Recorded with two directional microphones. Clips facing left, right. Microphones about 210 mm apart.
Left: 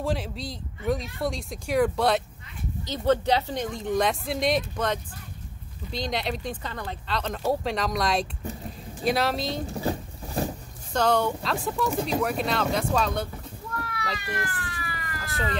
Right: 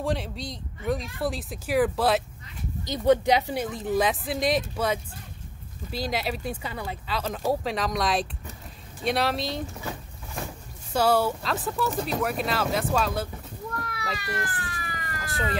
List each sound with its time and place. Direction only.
0.0 s speech: centre (ahead or behind)
2.8 s speech: 15° right (ahead or behind)
9.7 s boat: 35° left (ahead or behind)
10.9 s speech: 5° right (ahead or behind)
14.4 s emergency vehicle: 35° right (ahead or behind)
15.1 s cat: centre (ahead or behind)